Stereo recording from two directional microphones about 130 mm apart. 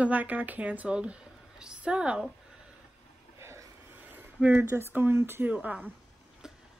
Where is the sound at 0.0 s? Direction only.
10° right (ahead or behind).